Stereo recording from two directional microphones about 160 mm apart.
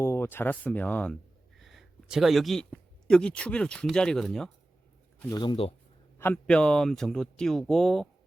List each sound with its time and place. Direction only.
0.0 s speech: 15° left (ahead or behind)
5.3 s speech: 30° left (ahead or behind)
6.1 s speech: 10° left (ahead or behind)